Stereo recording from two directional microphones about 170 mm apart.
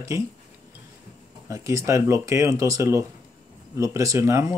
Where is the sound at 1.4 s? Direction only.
15° right (ahead or behind).